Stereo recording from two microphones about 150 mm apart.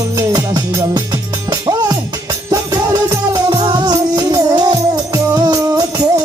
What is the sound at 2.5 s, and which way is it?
Music, 25° right (ahead or behind).